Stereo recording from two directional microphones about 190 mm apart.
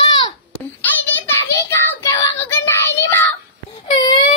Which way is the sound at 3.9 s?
25° left (ahead or behind).